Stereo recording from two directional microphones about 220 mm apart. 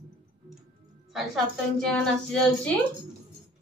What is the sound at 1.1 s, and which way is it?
A woman's voice, centre (ahead or behind).